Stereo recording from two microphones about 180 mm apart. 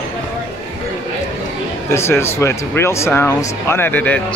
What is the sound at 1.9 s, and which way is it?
Speech, 15° left (ahead or behind).